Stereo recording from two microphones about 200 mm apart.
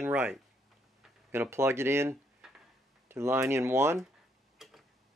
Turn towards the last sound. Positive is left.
turn(degrees=0)  # may be behind; listen again after turning